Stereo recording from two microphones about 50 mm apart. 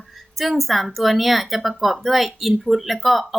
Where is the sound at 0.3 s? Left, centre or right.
Centre.